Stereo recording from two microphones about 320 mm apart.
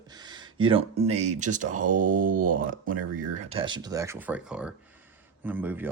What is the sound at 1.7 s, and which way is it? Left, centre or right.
Speech, right.